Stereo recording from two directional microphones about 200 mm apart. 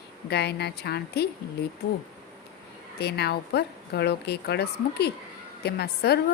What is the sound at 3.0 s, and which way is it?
A woman's voice, 55° left (ahead or behind).